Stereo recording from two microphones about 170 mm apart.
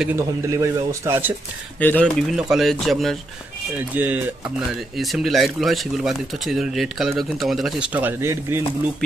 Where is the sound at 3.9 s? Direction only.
10° right (ahead or behind).